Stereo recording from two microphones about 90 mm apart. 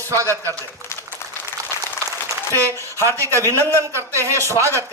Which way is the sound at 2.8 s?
35° right (ahead or behind).